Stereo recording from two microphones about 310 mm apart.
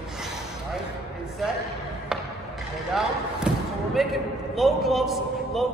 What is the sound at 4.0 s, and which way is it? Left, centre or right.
A man's voice, centre.